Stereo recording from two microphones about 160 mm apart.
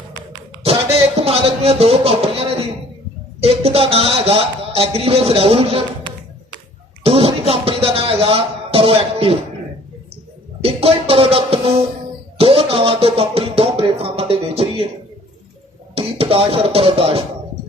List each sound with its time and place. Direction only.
1.2 s a sound: 40° right (ahead or behind)
3.4 s speech: 40° right (ahead or behind)
7.0 s music: 35° right (ahead or behind)
10.6 s speech: 35° right (ahead or behind)
12.4 s music: 35° right (ahead or behind)
16.0 s speech: 35° right (ahead or behind)